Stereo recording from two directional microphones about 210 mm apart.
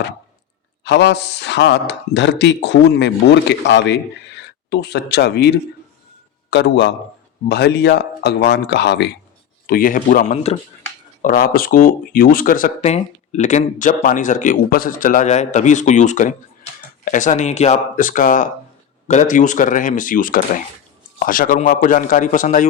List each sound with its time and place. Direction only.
0.9 s speech: 55° left (ahead or behind)
9.6 s speech: 45° left (ahead or behind)
11.2 s speech: 40° left (ahead or behind)